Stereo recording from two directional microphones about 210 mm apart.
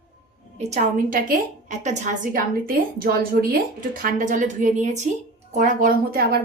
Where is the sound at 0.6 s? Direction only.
35° right (ahead or behind).